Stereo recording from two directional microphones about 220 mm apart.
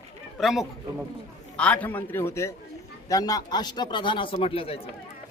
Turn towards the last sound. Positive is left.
turn(degrees=25)  # may be behind; listen again after turning